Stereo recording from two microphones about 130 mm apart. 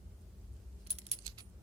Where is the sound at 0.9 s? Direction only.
55° right (ahead or behind).